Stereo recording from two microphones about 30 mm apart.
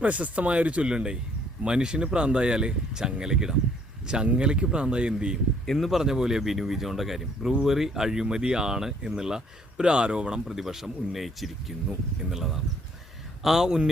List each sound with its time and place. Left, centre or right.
0.0 s speech: right
0.9 s speech: right
5.7 s speech: centre
6.0 s speech: centre
6.4 s speech: centre
9.8 s speech: right
10.4 s speech: centre